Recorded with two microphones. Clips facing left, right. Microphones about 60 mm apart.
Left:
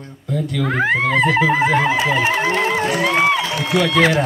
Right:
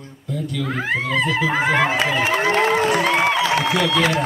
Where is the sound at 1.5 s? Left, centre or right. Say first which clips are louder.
Left 2 dB; right.